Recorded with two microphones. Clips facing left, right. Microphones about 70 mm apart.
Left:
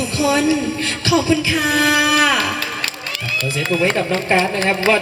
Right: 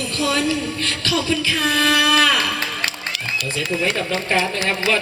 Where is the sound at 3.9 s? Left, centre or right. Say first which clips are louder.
Left 4 dB; left.